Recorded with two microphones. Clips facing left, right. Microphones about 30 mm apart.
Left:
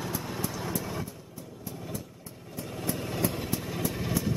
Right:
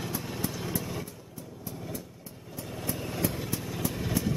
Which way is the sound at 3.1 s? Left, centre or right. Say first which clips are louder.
Even; left.